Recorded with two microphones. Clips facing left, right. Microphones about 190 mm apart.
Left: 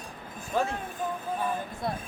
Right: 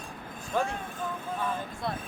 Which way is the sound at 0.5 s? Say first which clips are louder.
Left 1 dB; 10° left (ahead or behind).